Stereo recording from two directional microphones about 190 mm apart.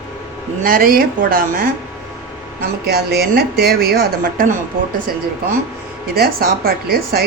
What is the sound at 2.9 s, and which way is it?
A woman's voice, 55° right (ahead or behind).